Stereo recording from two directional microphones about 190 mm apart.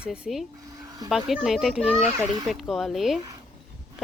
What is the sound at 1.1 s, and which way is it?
Speech, centre (ahead or behind).